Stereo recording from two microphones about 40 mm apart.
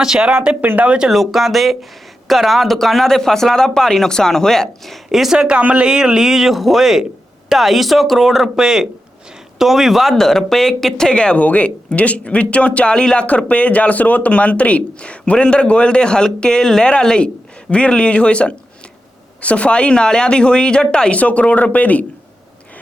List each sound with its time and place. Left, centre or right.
1.1 s speech: centre
5.3 s speech: right; by 10.2 s centre
10.2 s speech: centre
11.3 s speech: left
13.2 s speech: left
21.2 s speech: left